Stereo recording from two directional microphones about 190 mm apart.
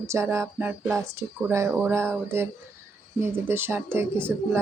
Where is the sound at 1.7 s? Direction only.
5° right (ahead or behind).